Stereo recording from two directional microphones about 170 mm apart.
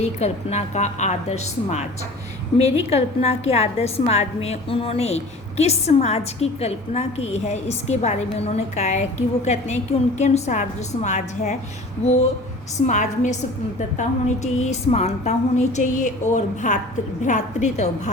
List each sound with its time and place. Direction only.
0.0 s a woman's voice: 40° left (ahead or behind)
12.8 s a woman's voice: 45° left (ahead or behind)